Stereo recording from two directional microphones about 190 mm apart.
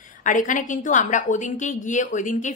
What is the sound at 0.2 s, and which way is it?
A woman's voice, 45° left (ahead or behind).